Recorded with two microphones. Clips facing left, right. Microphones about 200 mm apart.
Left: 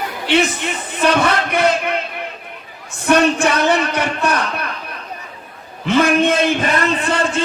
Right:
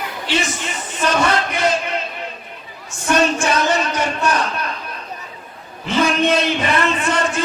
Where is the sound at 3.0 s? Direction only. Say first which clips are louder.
Left 3 dB; 60° left (ahead or behind).